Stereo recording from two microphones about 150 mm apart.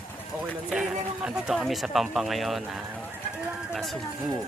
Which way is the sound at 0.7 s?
5° right (ahead or behind).